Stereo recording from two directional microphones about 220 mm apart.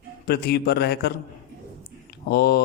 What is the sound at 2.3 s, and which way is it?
Speech, 45° left (ahead or behind).